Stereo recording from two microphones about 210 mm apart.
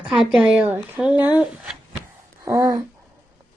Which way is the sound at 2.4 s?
15° right (ahead or behind).